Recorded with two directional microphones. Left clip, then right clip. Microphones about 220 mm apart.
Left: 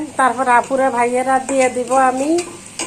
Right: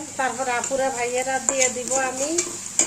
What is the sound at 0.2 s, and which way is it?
Speech, centre (ahead or behind).